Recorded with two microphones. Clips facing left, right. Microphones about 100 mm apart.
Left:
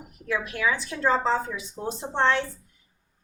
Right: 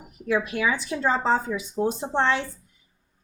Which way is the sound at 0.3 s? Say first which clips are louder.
Right 3 dB; 15° right (ahead or behind).